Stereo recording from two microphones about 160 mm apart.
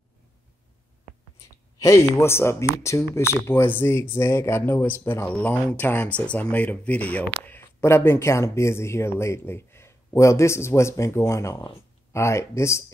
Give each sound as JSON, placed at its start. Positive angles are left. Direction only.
{"t": 1.8, "sound": "speech", "side_deg": 20}